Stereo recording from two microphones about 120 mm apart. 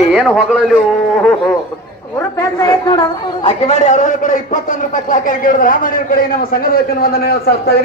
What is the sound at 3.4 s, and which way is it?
A man's voice, 65° left (ahead or behind).